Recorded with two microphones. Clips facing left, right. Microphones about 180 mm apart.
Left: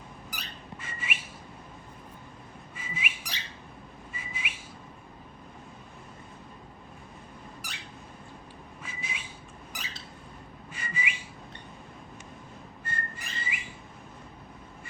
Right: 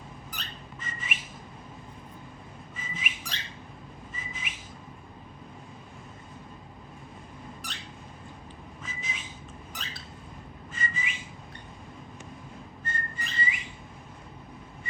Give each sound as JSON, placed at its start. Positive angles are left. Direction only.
{"t": 0.3, "sound": "whistling", "side_deg": 10}
{"t": 2.7, "sound": "whistling", "side_deg": 10}
{"t": 8.8, "sound": "whistling", "side_deg": 10}
{"t": 10.7, "sound": "whistling", "side_deg": 15}
{"t": 12.8, "sound": "whistling", "side_deg": 10}